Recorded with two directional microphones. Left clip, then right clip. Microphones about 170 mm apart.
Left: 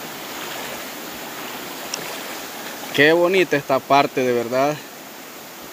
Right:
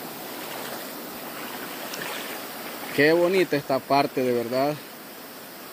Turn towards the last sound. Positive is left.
turn(degrees=-5)  # may be behind; listen again after turning